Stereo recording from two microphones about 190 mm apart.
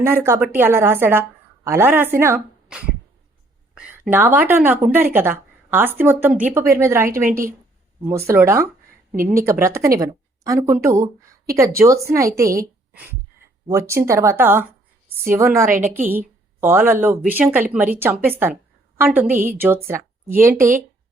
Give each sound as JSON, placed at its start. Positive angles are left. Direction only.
{"t": 0.0, "sound": "a woman's voice", "side_deg": -10}
{"t": 7.1, "sound": "a woman's voice", "side_deg": -45}
{"t": 8.3, "sound": "a woman's voice", "side_deg": -15}